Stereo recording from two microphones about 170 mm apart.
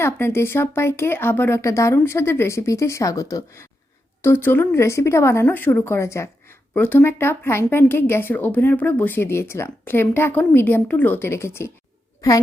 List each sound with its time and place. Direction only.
0.0 s speech: 15° left (ahead or behind)